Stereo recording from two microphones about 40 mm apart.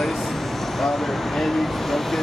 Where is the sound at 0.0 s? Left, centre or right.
Centre.